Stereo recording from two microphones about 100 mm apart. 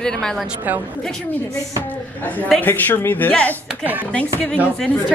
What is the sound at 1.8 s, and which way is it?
A woman's voice, 15° left (ahead or behind).